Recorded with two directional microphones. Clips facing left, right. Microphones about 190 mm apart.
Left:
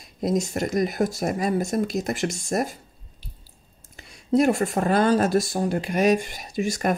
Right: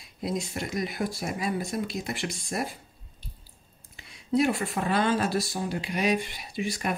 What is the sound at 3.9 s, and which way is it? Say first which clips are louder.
Speech: left 5 dB; 45° left (ahead or behind).